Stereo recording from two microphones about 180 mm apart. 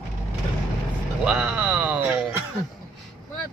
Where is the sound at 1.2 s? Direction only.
5° right (ahead or behind).